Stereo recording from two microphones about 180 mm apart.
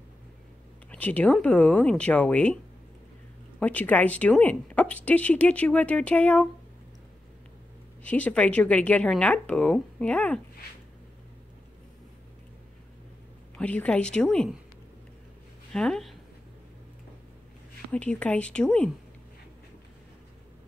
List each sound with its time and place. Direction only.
0.9 s a woman's voice: 10° left (ahead or behind)
8.0 s a woman's voice: 10° left (ahead or behind)
13.6 s a woman's voice: 5° left (ahead or behind)
15.7 s speech: 5° left (ahead or behind)
17.9 s a woman's voice: 5° left (ahead or behind)